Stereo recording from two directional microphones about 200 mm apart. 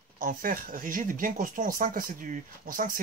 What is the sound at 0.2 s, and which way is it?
Speech, 40° right (ahead or behind).